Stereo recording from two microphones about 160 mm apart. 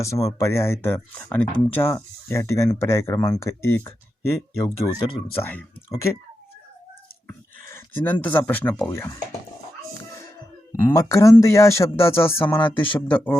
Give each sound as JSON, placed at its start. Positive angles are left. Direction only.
{"t": 0.0, "sound": "speech", "side_deg": 20}
{"t": 7.7, "sound": "speech", "side_deg": 10}
{"t": 10.8, "sound": "speech", "side_deg": 15}